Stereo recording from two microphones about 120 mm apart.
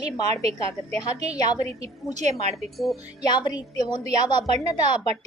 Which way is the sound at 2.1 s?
70° right (ahead or behind).